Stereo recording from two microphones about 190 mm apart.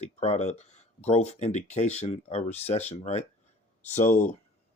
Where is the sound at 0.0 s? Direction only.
35° left (ahead or behind).